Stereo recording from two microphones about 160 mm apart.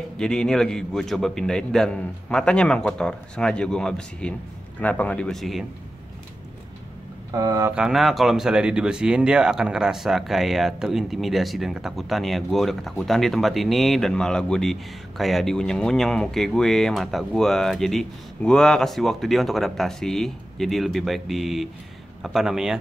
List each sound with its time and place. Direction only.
0.2 s speech: 5° left (ahead or behind)
7.3 s speech: 20° right (ahead or behind)
7.7 s speech: 5° right (ahead or behind)